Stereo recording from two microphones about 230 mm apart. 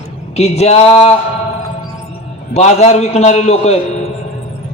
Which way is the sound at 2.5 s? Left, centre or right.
Left.